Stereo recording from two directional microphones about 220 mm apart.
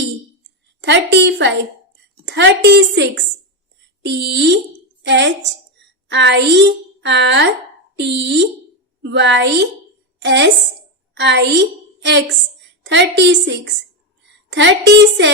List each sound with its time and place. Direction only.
0.8 s a woman's voice: 55° right (ahead or behind)